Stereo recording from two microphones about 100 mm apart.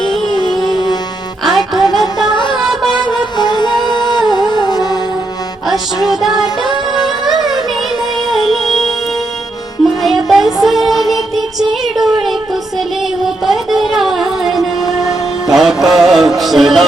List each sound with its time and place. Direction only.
0.3 s music: 45° left (ahead or behind)
1.5 s music: centre (ahead or behind)
2.3 s music: 50° left (ahead or behind)
2.6 s music: 5° right (ahead or behind)
3.1 s music: 45° left (ahead or behind)
5.6 s music: centre (ahead or behind)
11.9 s a sound: centre (ahead or behind)
13.2 s music: 5° right (ahead or behind)